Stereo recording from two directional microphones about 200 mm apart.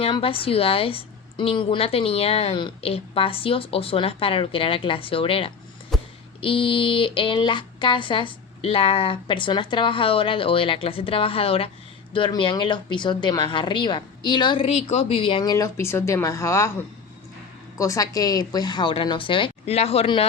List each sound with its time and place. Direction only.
0.0 s a woman's voice: 30° left (ahead or behind)
5.9 s a sound: centre (ahead or behind)
6.4 s a woman's voice: 25° left (ahead or behind)
17.7 s a woman's voice: 15° left (ahead or behind)